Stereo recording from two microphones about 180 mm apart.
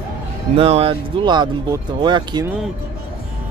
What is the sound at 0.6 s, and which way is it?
Speech, 35° right (ahead or behind).